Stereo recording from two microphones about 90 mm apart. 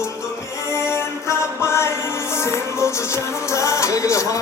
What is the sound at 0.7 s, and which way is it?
Music, 30° left (ahead or behind).